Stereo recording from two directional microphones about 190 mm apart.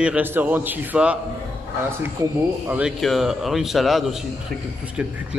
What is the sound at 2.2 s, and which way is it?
Speech, 15° right (ahead or behind).